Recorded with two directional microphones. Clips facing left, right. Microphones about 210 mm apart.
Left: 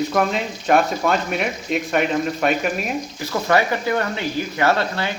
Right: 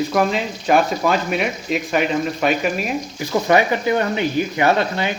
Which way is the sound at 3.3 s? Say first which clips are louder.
Right 3 dB; 20° right (ahead or behind).